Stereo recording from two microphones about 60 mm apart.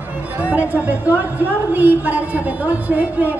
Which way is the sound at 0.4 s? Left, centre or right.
Right.